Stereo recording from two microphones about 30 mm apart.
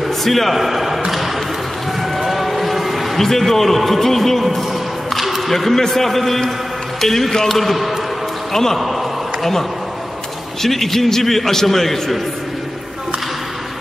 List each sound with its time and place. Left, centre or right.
0.2 s a man's voice: centre
0.6 s a man's voice: centre
2.1 s a sound: centre
3.2 s a man's voice: centre
9.4 s a man's voice: centre